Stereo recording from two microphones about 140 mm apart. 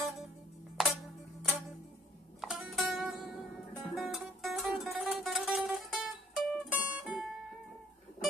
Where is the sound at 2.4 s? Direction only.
Centre (ahead or behind).